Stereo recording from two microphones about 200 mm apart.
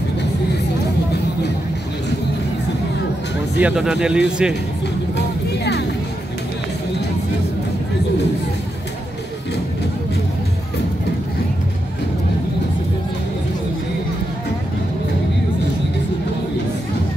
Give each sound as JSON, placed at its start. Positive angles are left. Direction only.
{"t": 3.5, "sound": "speech", "side_deg": -5}
{"t": 5.1, "sound": "music", "side_deg": 55}